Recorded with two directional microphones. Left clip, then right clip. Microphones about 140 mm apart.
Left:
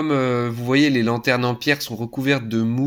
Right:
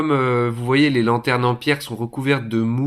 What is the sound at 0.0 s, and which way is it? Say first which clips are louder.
Speech: right 2 dB; 35° left (ahead or behind).